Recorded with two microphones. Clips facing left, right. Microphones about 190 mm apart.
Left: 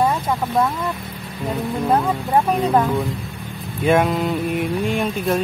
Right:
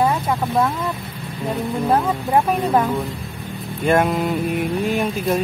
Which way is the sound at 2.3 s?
10° right (ahead or behind).